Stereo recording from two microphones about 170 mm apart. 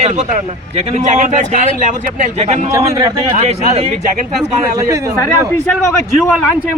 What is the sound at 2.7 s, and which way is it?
Speech, 15° right (ahead or behind).